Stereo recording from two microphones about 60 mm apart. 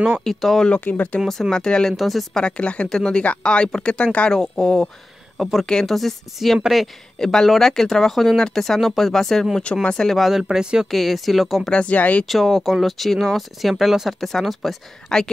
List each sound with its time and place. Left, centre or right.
0.2 s speech: centre
0.7 s speech: left
1.5 s speech: centre
2.0 s speech: centre
2.3 s speech: centre
5.4 s speech: centre
10.9 s speech: centre
11.7 s speech: left
12.3 s speech: centre